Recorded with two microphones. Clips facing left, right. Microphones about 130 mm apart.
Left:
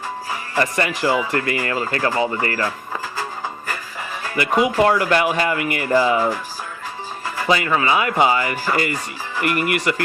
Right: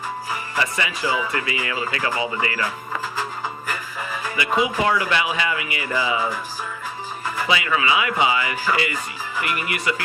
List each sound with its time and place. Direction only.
0.5 s speech: 50° left (ahead or behind)
4.4 s speech: 55° left (ahead or behind)
7.4 s speech: 45° left (ahead or behind)